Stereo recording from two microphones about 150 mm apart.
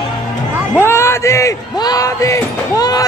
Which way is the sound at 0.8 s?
15° left (ahead or behind).